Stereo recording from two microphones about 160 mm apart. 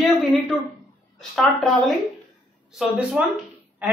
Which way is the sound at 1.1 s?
5° left (ahead or behind).